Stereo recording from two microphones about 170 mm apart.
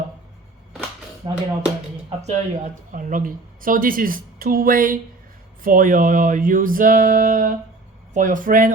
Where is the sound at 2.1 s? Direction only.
40° right (ahead or behind).